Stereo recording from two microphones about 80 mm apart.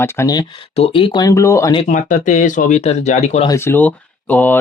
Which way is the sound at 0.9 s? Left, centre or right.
Left.